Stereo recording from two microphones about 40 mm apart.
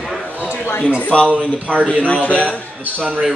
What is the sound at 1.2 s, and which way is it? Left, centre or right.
Speech, right.